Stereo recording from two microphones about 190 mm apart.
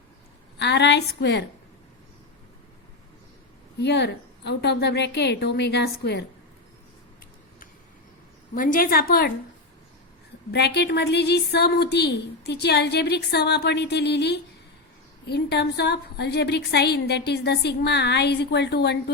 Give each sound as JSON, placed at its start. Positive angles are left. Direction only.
{"t": 0.6, "sound": "a woman's voice", "side_deg": 65}
{"t": 3.8, "sound": "a woman's voice", "side_deg": 65}
{"t": 8.5, "sound": "a woman's voice", "side_deg": 45}
{"t": 10.5, "sound": "a woman's voice", "side_deg": 60}